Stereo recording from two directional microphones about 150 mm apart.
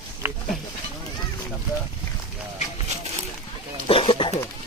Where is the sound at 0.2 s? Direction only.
20° right (ahead or behind).